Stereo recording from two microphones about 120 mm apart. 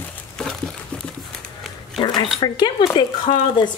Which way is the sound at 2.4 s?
40° left (ahead or behind).